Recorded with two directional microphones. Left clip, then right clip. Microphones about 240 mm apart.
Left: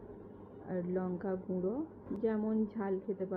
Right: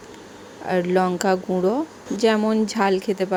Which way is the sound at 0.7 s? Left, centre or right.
Right.